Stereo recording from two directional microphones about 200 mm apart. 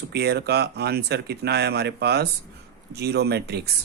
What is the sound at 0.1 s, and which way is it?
Speech, 55° right (ahead or behind).